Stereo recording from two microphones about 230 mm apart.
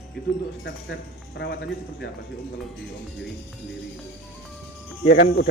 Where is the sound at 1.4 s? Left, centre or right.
Left.